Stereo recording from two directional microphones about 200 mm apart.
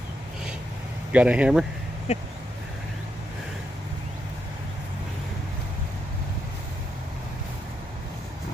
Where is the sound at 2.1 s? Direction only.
35° left (ahead or behind).